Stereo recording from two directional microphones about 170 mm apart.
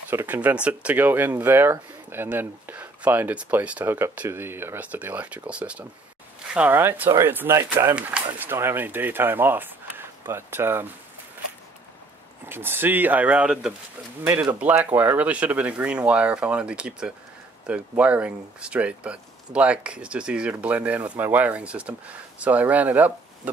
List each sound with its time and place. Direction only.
0.1 s speech: 10° right (ahead or behind)
12.4 s speech: 10° right (ahead or behind)